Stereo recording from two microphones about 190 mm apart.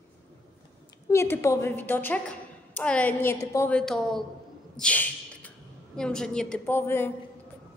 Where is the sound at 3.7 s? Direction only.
5° left (ahead or behind).